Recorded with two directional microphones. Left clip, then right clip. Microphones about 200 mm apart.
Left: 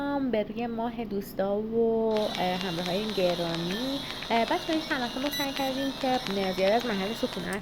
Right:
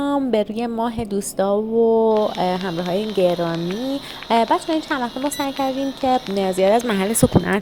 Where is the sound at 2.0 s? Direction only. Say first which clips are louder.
Right 9 dB; 40° right (ahead or behind).